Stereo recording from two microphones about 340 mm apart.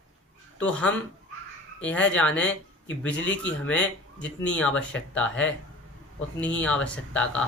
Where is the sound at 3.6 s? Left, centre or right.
Centre.